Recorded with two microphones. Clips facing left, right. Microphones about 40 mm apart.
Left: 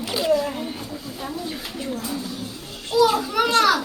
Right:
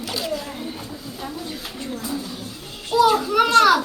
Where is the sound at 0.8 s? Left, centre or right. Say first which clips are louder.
Left 1 dB; centre.